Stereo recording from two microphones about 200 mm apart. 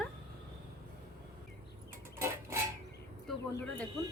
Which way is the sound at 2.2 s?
15° right (ahead or behind).